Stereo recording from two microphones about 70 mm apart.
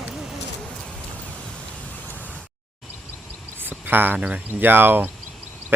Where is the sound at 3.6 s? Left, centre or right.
Right.